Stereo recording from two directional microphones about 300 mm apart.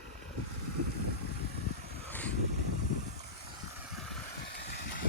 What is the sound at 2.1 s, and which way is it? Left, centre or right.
Vehicle, centre.